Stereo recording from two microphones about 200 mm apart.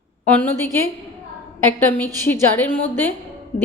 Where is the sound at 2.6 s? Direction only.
10° left (ahead or behind).